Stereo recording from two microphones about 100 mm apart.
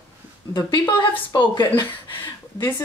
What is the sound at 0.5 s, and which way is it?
Speech, 45° left (ahead or behind).